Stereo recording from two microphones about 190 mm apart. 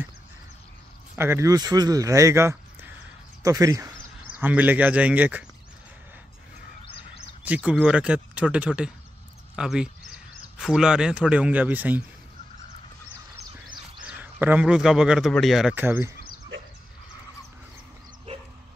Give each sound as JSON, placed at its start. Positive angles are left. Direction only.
{"t": 1.1, "sound": "speech", "side_deg": -15}
{"t": 7.4, "sound": "a man's voice", "side_deg": -5}
{"t": 14.0, "sound": "a man's voice", "side_deg": -10}